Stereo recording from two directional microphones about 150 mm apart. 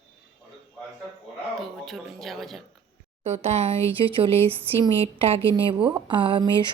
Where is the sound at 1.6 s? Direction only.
Centre (ahead or behind).